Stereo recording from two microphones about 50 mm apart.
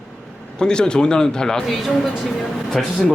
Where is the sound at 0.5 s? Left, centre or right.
Centre.